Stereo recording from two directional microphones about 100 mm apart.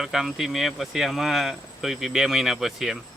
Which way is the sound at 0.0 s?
5° right (ahead or behind).